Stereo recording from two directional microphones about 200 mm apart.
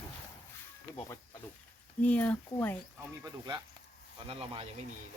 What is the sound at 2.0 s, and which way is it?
Speech, 5° left (ahead or behind).